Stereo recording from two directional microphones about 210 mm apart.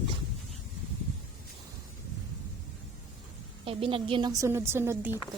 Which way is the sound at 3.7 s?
25° right (ahead or behind).